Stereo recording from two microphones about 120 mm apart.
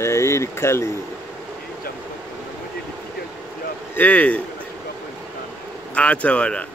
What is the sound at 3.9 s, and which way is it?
Speech, 15° left (ahead or behind).